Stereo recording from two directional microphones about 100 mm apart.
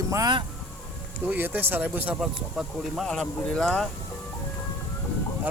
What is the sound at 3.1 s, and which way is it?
Speech, 5° left (ahead or behind).